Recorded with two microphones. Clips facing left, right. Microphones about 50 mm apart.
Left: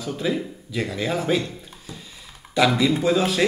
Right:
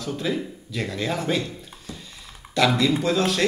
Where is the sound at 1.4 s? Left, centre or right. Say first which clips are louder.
Left 1 dB; centre.